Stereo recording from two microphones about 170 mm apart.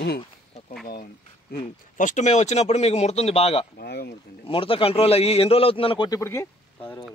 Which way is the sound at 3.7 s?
65° left (ahead or behind).